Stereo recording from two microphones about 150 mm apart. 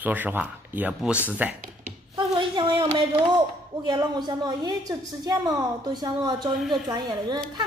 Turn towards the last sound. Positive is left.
turn(degrees=-25)  # may be behind; listen again after turning